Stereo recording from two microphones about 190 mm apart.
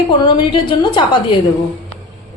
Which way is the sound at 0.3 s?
25° left (ahead or behind).